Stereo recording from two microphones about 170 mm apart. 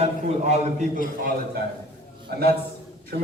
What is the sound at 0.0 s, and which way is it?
Speech, 40° right (ahead or behind).